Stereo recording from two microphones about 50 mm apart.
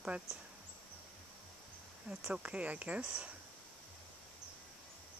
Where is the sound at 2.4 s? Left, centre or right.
Right.